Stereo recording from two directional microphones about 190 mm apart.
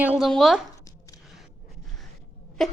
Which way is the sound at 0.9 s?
20° left (ahead or behind).